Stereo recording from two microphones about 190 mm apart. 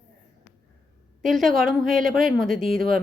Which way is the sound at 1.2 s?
Centre (ahead or behind).